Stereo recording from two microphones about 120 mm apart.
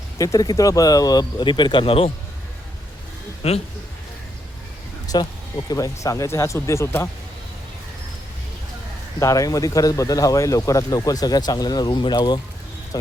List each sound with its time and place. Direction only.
0.2 s speech: 30° left (ahead or behind); by 2.1 s 50° left (ahead or behind)
3.4 s a man's voice: 60° left (ahead or behind)
5.1 s speech: 35° left (ahead or behind)
9.2 s speech: 30° left (ahead or behind)